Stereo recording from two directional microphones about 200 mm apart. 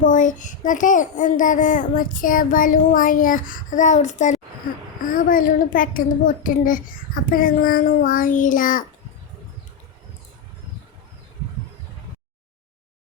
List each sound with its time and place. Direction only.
0.0 s a child's voice: 40° left (ahead or behind)